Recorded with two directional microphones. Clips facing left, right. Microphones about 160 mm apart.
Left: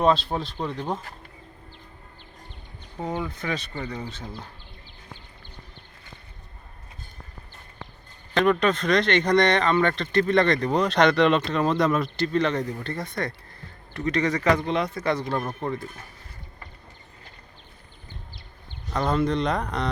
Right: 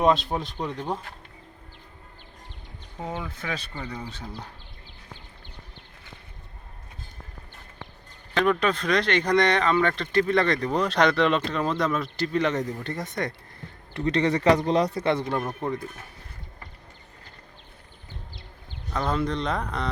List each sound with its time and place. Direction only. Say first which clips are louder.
0.3 s speech: left 1 dB; 20° right (ahead or behind)
3.0 s speech: left 4 dB; 5° right (ahead or behind)
8.3 s speech: left 2 dB; 5° right (ahead or behind)
12.1 s speech: left 1 dB; 10° right (ahead or behind)
13.9 s a man's voice: right 1 dB; 30° right (ahead or behind)
15.4 s speech: even; 5° right (ahead or behind)
18.9 s speech: left 3 dB; centre (ahead or behind)